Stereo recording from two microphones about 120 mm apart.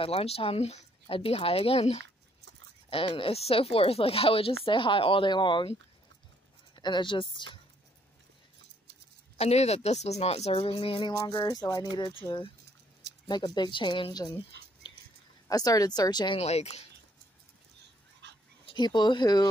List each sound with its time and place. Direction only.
0.0 s a woman's voice: 55° left (ahead or behind)
6.7 s speech: 40° left (ahead or behind)
9.4 s speech: 65° left (ahead or behind); by 14.3 s 40° left (ahead or behind)
14.8 s a sound: 40° left (ahead or behind)
15.4 s speech: 30° left (ahead or behind)
16.3 s a woman's voice: 60° left (ahead or behind)
18.7 s speech: 40° left (ahead or behind)